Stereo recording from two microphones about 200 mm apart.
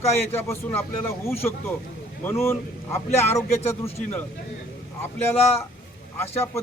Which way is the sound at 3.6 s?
30° left (ahead or behind).